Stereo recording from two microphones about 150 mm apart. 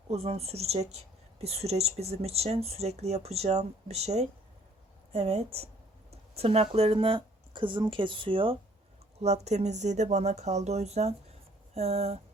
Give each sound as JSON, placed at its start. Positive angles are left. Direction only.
{"t": 0.1, "sound": "speech", "side_deg": -45}
{"t": 9.2, "sound": "speech", "side_deg": -50}